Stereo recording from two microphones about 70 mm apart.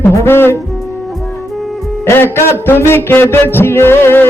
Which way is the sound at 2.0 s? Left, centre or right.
Left.